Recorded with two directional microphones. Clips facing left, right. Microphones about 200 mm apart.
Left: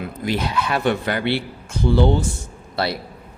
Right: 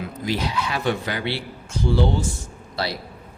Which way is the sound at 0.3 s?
55° left (ahead or behind).